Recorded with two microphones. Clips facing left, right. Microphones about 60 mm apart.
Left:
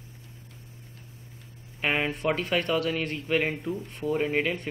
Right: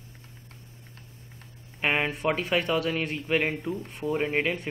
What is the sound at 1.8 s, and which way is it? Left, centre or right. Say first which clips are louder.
Speech: right 1 dB; centre.